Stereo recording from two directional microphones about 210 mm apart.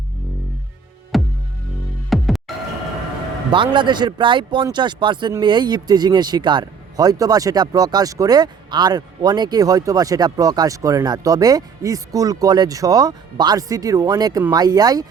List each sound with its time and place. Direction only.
1.1 s music: centre (ahead or behind)
3.5 s speech: 25° right (ahead or behind)